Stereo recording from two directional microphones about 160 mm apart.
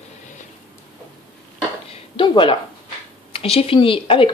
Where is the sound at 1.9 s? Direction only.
30° left (ahead or behind).